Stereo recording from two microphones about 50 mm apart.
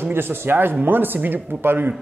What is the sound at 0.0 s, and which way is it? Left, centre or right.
A man's voice, right.